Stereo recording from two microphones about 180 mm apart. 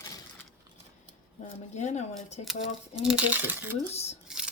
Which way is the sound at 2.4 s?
5° right (ahead or behind).